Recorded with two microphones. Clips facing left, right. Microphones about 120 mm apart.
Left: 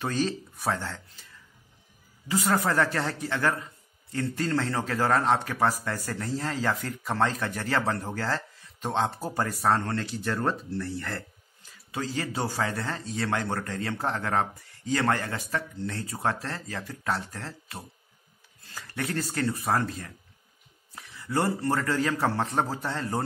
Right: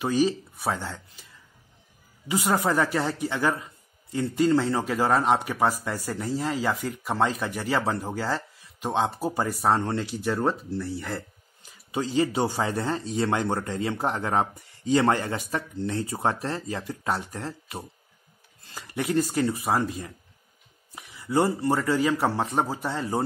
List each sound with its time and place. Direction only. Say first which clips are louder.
0.0 s speech: right 5 dB; 10° right (ahead or behind)
2.2 s speech: right 1 dB; 15° right (ahead or behind)